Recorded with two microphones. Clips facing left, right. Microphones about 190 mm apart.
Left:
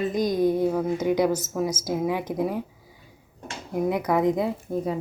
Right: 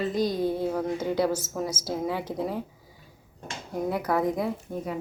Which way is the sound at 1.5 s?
10° left (ahead or behind).